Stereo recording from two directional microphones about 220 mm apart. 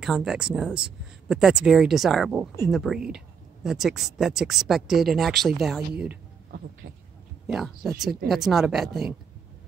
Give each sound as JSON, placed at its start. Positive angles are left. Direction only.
{"t": 0.0, "sound": "speech", "side_deg": 0}
{"t": 6.8, "sound": "speech", "side_deg": -60}
{"t": 7.4, "sound": "speech", "side_deg": 0}